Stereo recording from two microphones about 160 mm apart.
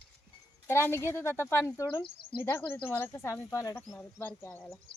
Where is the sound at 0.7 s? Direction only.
15° left (ahead or behind).